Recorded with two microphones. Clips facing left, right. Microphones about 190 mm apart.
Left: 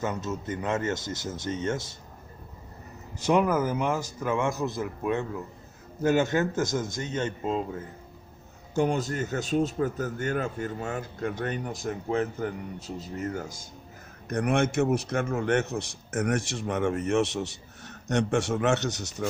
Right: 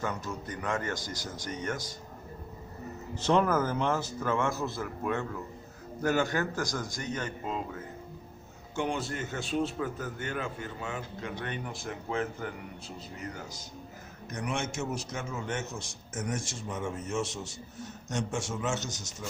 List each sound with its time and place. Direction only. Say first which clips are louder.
0.0 s a man's voice: left 4 dB; 20° left (ahead or behind)
3.2 s a man's voice: left 2 dB; 10° left (ahead or behind); by 7.8 s 25° left (ahead or behind)
8.7 s a man's voice: left 6 dB; 40° left (ahead or behind); by 19.3 s 65° left (ahead or behind)